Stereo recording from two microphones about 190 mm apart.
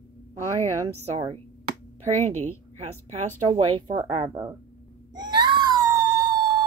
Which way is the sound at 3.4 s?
25° right (ahead or behind).